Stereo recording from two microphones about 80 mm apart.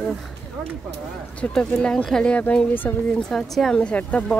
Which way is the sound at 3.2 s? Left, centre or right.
Centre.